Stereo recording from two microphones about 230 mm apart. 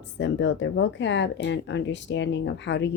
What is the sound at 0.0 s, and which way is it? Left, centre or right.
Speech, left.